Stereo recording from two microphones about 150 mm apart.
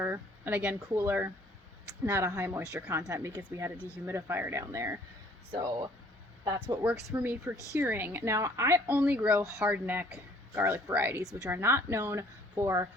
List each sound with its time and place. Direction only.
0.0 s speech: 15° right (ahead or behind)
3.8 s speech: 15° left (ahead or behind)
4.0 s speech: 15° right (ahead or behind)
9.0 s speech: 10° right (ahead or behind)